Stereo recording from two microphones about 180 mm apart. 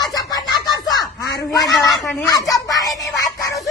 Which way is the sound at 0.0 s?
20° left (ahead or behind).